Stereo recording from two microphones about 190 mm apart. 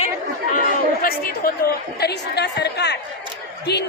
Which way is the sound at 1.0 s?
50° left (ahead or behind).